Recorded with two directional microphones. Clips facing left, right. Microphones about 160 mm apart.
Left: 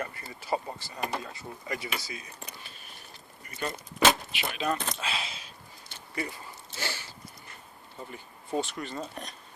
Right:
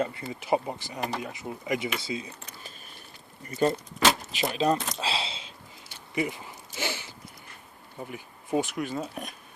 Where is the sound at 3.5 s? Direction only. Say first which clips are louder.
Right 10 dB; 35° right (ahead or behind).